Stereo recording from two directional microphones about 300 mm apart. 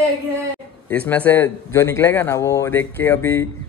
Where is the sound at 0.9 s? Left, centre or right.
Centre.